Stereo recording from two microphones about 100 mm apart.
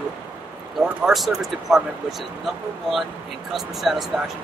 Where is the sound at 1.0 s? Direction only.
Centre (ahead or behind).